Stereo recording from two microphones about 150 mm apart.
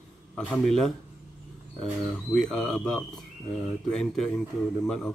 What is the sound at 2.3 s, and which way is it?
Speech, 5° left (ahead or behind).